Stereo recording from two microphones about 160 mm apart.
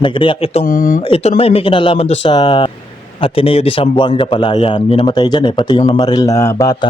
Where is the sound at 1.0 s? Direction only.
35° left (ahead or behind).